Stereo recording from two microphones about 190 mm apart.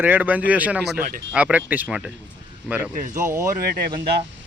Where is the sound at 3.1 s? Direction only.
15° right (ahead or behind).